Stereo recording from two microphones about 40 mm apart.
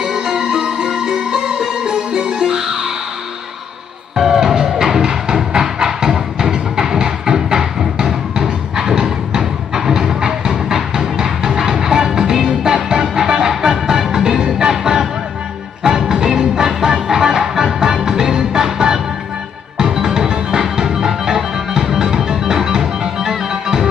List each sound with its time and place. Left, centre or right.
0.0 s music: centre
4.1 s music: centre